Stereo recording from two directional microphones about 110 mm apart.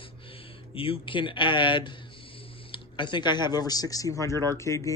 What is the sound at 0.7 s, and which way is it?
Speech, 55° left (ahead or behind).